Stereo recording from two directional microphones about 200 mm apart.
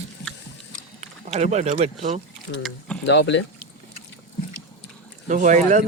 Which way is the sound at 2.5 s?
65° left (ahead or behind).